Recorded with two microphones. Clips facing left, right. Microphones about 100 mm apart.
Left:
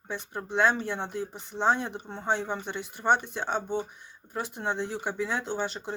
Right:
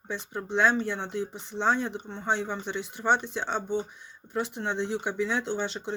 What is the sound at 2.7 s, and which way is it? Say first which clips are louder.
Speech: right 2 dB; 50° left (ahead or behind).